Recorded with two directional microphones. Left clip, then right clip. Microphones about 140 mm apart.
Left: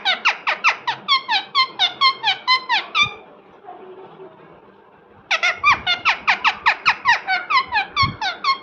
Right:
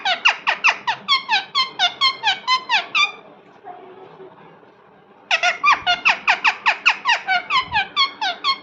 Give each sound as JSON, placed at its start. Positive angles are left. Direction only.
{"t": 0.0, "sound": "squeak", "side_deg": -5}
{"t": 5.3, "sound": "squeak", "side_deg": 0}